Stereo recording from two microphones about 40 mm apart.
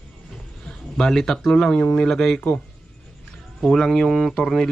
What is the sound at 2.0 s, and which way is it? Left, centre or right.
Speech, centre.